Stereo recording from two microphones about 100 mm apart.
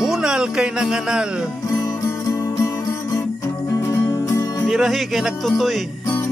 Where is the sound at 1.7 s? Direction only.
35° left (ahead or behind).